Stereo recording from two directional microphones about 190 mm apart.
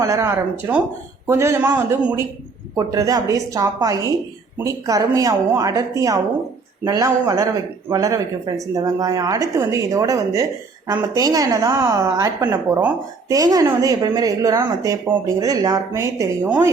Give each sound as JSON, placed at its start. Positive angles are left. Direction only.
{"t": 0.0, "sound": "a woman's voice", "side_deg": -15}